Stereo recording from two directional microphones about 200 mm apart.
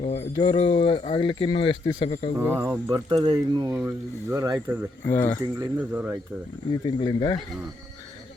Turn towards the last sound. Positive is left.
turn(degrees=20)  # may be behind; listen again after turning